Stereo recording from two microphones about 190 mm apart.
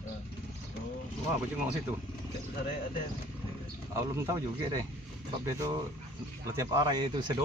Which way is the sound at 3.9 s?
15° right (ahead or behind).